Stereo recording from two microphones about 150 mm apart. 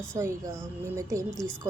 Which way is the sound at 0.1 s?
20° right (ahead or behind).